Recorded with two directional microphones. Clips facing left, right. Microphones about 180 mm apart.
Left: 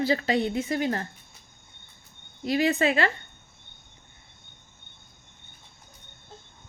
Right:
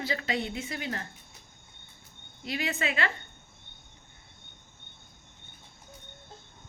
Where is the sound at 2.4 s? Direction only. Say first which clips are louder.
Left 9 dB; 40° left (ahead or behind).